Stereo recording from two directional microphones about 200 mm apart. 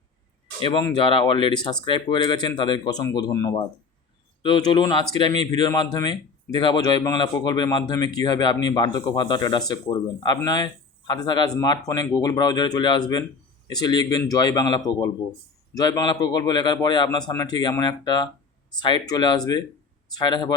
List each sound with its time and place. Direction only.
0.6 s speech: 25° left (ahead or behind)